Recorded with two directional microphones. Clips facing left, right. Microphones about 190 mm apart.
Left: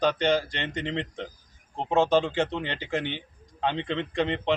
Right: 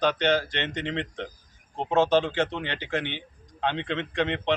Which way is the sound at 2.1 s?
10° left (ahead or behind).